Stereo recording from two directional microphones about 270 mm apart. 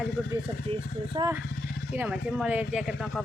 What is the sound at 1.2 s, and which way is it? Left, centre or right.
Speech, centre.